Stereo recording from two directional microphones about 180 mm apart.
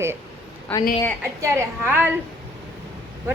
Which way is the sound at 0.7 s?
10° left (ahead or behind).